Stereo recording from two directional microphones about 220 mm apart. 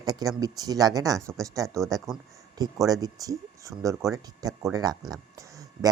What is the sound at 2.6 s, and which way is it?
Speech, 15° right (ahead or behind).